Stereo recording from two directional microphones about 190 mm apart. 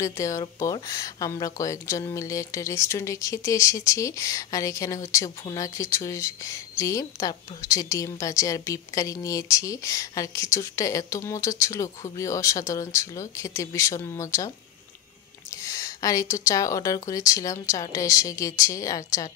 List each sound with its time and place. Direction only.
0.0 s speech: 15° left (ahead or behind)
15.5 s speech: 15° left (ahead or behind)